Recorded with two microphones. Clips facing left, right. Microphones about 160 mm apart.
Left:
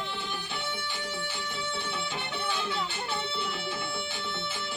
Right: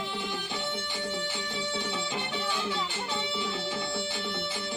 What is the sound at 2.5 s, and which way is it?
Music, 15° right (ahead or behind).